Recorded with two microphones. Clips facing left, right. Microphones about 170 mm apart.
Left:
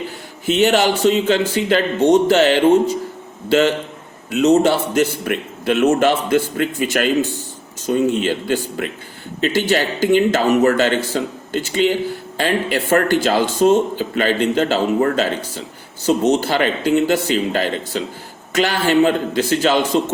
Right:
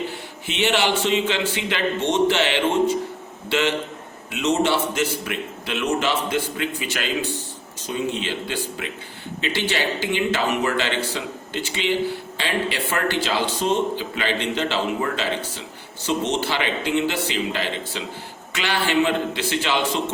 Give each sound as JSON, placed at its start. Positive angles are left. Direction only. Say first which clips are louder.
{"t": 0.4, "sound": "speech", "louder": "left 7 dB", "side_deg": 40}
{"t": 4.3, "sound": "a man's voice", "louder": "left 7 dB", "side_deg": 40}